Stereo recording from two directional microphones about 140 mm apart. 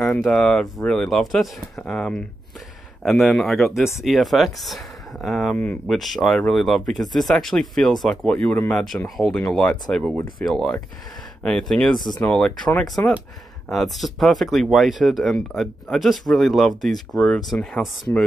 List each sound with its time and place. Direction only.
0.0 s speech: 5° left (ahead or behind)
13.7 s speech: centre (ahead or behind)